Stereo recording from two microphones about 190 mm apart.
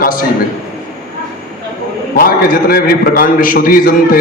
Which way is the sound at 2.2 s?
50° left (ahead or behind).